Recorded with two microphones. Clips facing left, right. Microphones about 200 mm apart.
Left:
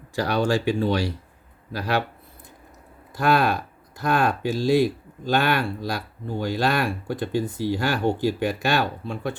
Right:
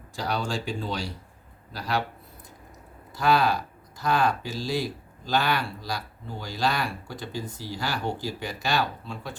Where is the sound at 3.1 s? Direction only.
55° left (ahead or behind).